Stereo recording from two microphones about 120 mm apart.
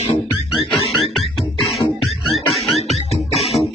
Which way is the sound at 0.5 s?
Centre (ahead or behind).